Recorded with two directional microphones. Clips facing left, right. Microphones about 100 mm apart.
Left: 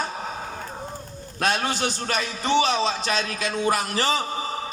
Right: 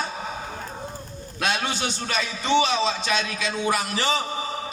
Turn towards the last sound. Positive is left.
turn(degrees=40)  # may be behind; listen again after turning